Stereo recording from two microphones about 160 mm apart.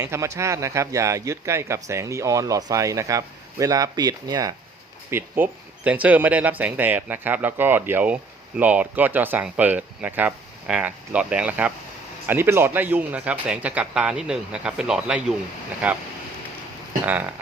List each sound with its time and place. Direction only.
0.0 s speech: 20° right (ahead or behind)
5.1 s speech: 15° right (ahead or behind)
17.1 s speech: 10° right (ahead or behind)